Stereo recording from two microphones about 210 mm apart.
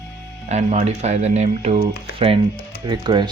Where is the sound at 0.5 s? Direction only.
30° right (ahead or behind).